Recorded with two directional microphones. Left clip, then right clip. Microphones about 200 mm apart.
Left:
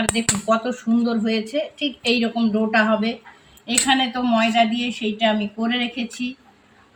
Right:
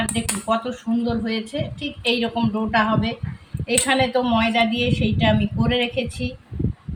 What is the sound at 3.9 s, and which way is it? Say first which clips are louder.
A woman's voice: right 1 dB; 20° right (ahead or behind).